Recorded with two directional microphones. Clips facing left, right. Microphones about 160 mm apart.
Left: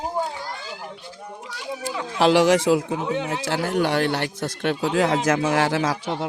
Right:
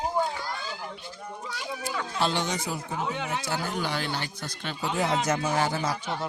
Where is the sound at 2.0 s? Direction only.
90° left.